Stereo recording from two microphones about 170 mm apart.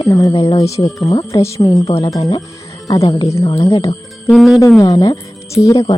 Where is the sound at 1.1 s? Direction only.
20° left (ahead or behind).